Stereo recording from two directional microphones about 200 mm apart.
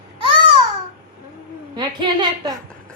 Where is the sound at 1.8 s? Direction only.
20° right (ahead or behind).